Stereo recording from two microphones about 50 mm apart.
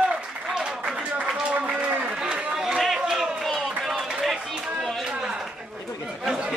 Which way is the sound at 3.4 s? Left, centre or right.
Centre.